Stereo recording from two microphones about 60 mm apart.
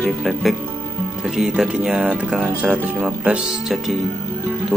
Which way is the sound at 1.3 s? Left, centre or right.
Centre.